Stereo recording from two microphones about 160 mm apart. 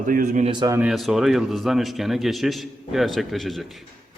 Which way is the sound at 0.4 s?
30° right (ahead or behind).